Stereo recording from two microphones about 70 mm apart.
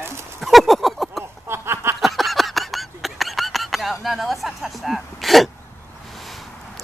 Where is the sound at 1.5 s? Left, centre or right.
Right.